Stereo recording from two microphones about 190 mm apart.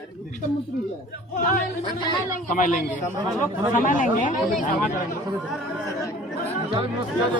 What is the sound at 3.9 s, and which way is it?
Speech, 45° left (ahead or behind).